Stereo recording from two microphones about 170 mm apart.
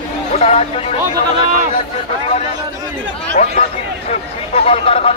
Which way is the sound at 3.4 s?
45° left (ahead or behind).